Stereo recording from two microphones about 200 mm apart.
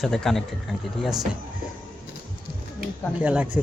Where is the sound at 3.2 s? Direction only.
5° right (ahead or behind).